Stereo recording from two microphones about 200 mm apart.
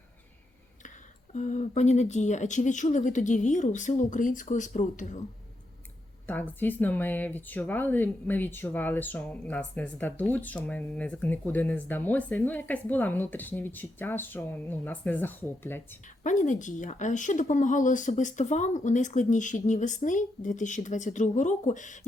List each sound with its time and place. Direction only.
1.3 s speech: 35° left (ahead or behind)
6.2 s speech: 10° left (ahead or behind)
16.2 s speech: 40° left (ahead or behind)